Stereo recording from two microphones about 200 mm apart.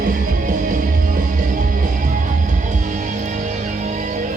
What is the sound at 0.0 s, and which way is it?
Music, 45° right (ahead or behind).